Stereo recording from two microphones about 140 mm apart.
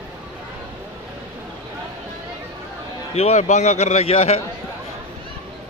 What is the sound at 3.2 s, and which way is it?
A man's voice, 55° left (ahead or behind).